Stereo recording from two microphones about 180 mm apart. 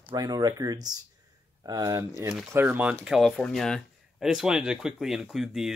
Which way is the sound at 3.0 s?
Centre (ahead or behind).